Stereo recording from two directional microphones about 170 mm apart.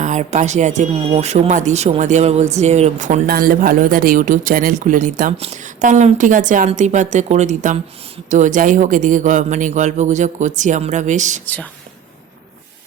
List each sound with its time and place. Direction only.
0.0 s speech: 45° right (ahead or behind)
11.4 s speech: 10° left (ahead or behind)